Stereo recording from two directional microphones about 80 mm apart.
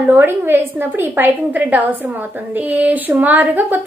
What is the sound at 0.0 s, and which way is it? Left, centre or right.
A woman's voice, right.